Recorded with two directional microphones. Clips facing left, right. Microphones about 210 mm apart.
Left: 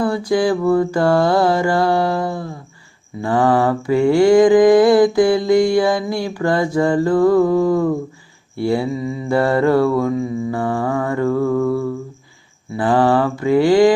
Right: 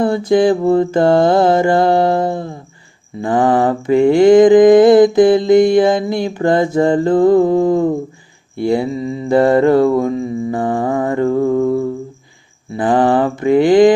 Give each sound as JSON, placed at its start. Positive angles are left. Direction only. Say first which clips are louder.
{"t": 0.0, "sound": "mantra", "louder": "right 4 dB", "side_deg": -20}